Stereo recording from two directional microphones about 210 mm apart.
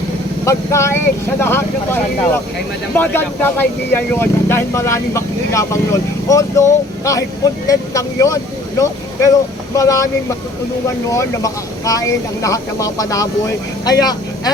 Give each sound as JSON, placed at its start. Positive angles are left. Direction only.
{"t": 0.4, "sound": "speech", "side_deg": 15}
{"t": 9.7, "sound": "speech", "side_deg": 15}
{"t": 11.1, "sound": "speech", "side_deg": 15}